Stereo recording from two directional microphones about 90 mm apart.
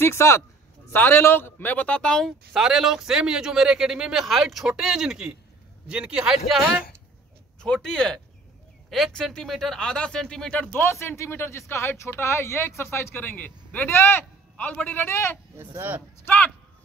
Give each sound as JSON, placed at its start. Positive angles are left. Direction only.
{"t": 0.0, "sound": "speech", "side_deg": 30}
{"t": 2.2, "sound": "speech", "side_deg": -5}
{"t": 7.6, "sound": "speech", "side_deg": 5}
{"t": 10.9, "sound": "speech", "side_deg": 30}
{"t": 15.5, "sound": "speech", "side_deg": -25}
{"t": 16.3, "sound": "speech", "side_deg": 20}